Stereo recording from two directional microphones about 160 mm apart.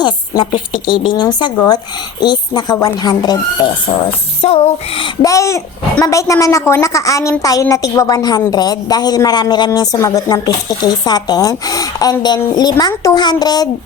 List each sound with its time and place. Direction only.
0.0 s a child's voice: 30° left (ahead or behind)
4.4 s speech: 40° left (ahead or behind)
5.2 s a child's voice: 20° left (ahead or behind)